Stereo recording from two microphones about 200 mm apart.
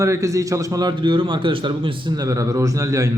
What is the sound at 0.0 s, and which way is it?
A man's voice, 15° right (ahead or behind).